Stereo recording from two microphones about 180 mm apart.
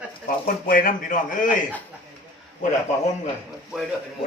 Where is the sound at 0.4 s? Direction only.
50° left (ahead or behind).